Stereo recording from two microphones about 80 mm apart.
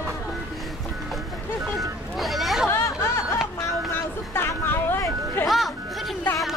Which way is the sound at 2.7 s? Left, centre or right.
Left.